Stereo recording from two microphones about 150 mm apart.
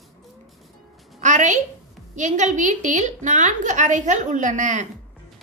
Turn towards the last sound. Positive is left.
turn(degrees=-55)  # may be behind; listen again after turning